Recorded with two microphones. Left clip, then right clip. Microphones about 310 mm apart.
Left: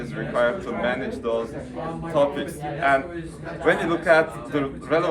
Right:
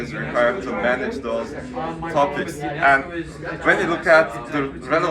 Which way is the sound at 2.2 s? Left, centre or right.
Centre.